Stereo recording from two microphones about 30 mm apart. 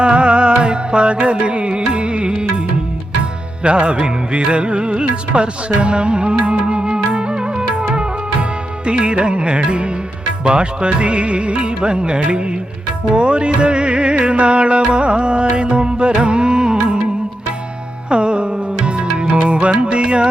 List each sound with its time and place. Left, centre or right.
0.0 s music: right
3.6 s music: right
18.1 s music: right